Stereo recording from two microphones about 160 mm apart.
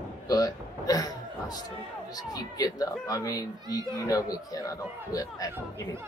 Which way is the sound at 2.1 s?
25° left (ahead or behind).